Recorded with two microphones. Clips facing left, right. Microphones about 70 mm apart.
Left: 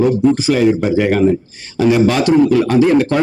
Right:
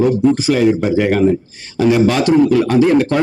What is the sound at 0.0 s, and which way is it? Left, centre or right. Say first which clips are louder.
A man's voice: even; left.